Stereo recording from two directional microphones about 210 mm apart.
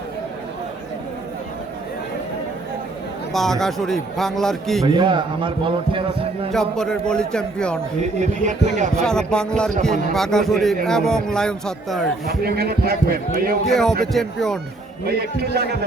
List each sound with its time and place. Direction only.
3.3 s a man's voice: centre (ahead or behind)
4.9 s a man's voice: 25° right (ahead or behind)
6.5 s a man's voice: 5° left (ahead or behind)
8.2 s speech: 35° right (ahead or behind)
9.0 s a man's voice: 5° left (ahead or behind)
12.2 s a man's voice: 45° right (ahead or behind)
13.7 s a man's voice: centre (ahead or behind)
15.0 s a man's voice: 50° right (ahead or behind)